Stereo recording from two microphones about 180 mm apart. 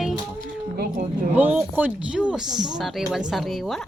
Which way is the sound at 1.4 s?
10° right (ahead or behind).